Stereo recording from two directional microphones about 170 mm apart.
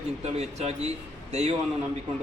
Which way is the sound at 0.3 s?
40° right (ahead or behind).